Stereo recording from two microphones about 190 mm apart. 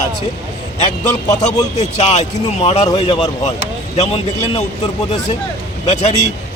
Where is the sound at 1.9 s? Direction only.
35° left (ahead or behind).